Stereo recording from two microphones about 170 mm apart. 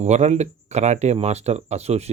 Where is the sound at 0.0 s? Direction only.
40° right (ahead or behind).